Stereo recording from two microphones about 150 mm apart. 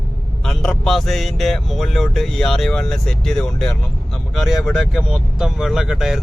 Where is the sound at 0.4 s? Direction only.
5° left (ahead or behind).